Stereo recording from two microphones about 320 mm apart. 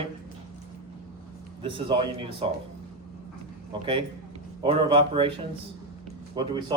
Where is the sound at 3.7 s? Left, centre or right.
Centre.